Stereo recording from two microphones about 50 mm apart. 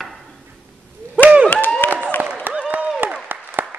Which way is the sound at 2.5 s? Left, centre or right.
Right.